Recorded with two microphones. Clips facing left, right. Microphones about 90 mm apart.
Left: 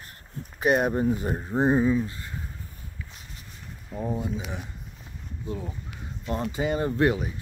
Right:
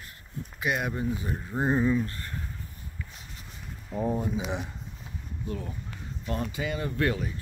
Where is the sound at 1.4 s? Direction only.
25° left (ahead or behind).